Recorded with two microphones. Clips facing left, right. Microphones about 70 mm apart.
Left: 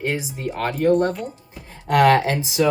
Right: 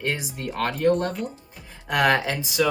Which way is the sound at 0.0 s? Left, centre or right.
Centre.